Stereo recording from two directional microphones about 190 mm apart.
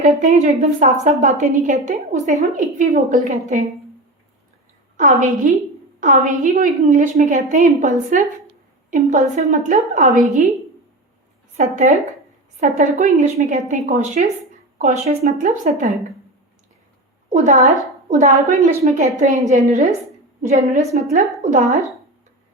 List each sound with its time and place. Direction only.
0.0 s a woman's voice: 40° right (ahead or behind)
5.0 s a woman's voice: 40° right (ahead or behind)
11.5 s a woman's voice: 40° right (ahead or behind)
17.2 s a woman's voice: 40° right (ahead or behind)